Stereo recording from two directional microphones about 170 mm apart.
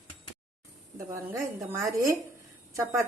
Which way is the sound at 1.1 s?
15° right (ahead or behind).